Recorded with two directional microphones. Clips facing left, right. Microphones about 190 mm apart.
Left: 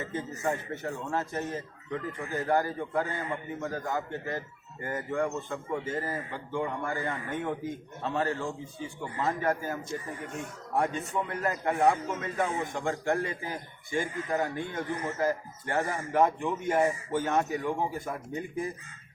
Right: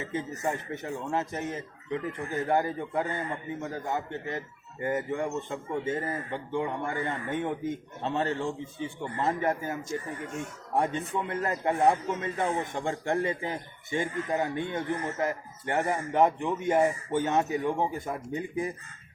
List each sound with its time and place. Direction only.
0.0 s speech: 15° right (ahead or behind)
10.8 s speech: 25° right (ahead or behind)